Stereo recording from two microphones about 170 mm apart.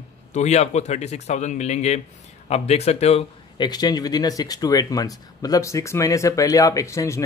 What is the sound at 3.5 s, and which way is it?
Speech, 25° left (ahead or behind).